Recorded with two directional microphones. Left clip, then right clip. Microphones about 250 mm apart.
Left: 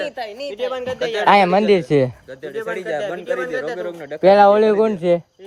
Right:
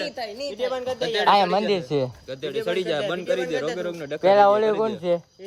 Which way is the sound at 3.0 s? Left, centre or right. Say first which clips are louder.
Left 2 dB; centre.